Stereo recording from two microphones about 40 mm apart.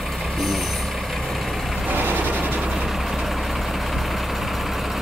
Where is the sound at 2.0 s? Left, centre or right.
Right.